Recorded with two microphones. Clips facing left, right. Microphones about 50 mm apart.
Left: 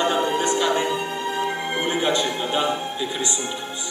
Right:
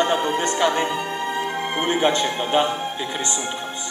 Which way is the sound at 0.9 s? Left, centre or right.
Centre.